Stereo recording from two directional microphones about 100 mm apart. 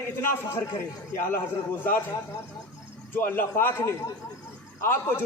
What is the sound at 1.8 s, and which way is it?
Speech, 20° left (ahead or behind).